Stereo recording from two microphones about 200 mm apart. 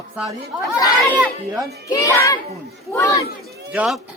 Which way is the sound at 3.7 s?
Centre (ahead or behind).